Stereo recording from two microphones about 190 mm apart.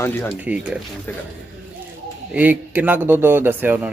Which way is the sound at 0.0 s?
10° left (ahead or behind).